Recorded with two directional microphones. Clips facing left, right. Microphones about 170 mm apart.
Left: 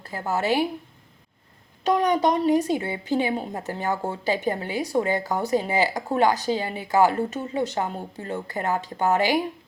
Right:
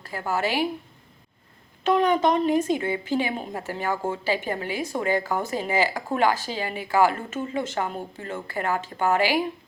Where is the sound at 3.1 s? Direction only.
20° left (ahead or behind).